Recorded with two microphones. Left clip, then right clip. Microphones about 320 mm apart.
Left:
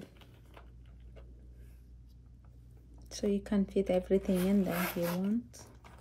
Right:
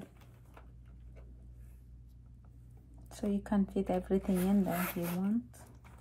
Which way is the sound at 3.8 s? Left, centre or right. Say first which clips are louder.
Left 6 dB; centre.